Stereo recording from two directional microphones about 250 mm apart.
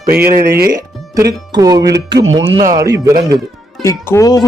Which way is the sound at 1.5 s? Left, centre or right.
Centre.